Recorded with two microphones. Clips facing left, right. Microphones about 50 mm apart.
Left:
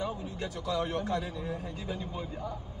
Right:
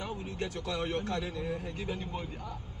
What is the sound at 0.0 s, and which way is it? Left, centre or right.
A man's voice, right.